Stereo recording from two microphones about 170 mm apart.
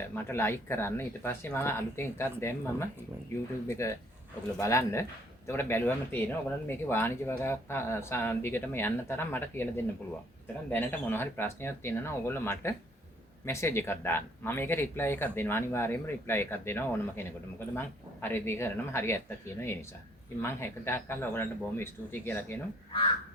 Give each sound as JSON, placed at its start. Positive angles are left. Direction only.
{"t": 0.3, "sound": "speech", "side_deg": 15}